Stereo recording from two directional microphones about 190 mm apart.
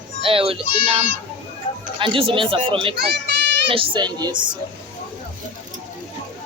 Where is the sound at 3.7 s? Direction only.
30° right (ahead or behind).